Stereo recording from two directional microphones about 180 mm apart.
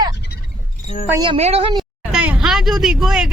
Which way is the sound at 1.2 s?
30° right (ahead or behind).